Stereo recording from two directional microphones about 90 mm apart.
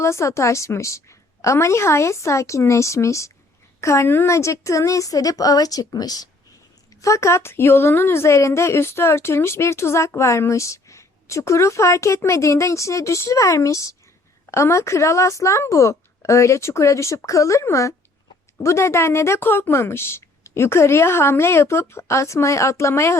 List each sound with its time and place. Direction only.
0.0 s a woman's voice: 30° left (ahead or behind)
7.0 s a woman's voice: 35° left (ahead or behind)